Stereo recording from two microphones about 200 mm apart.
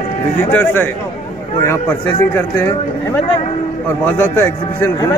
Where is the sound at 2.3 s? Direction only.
10° left (ahead or behind).